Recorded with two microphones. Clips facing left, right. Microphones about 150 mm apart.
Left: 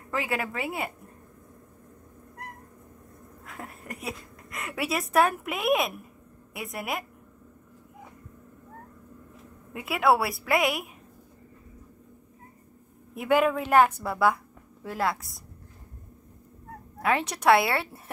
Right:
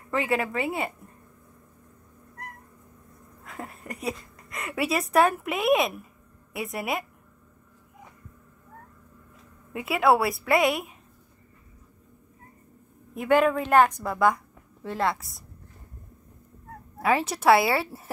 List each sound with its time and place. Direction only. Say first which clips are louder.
0.1 s a woman's voice: right 4 dB; centre (ahead or behind)
3.4 s a woman's voice: right 2 dB; centre (ahead or behind)
9.7 s a woman's voice: right 2 dB; centre (ahead or behind)
13.1 s a woman's voice: right 2 dB; 5° left (ahead or behind)
17.0 s a woman's voice: right 2 dB; centre (ahead or behind)